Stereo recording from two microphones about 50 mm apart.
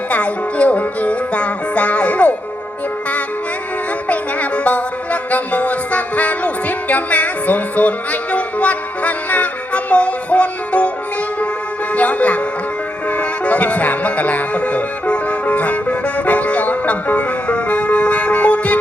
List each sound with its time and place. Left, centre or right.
0.1 s music: left
4.1 s music: left
11.9 s music: left